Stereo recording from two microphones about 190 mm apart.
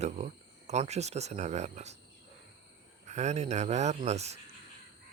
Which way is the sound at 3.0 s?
35° right (ahead or behind).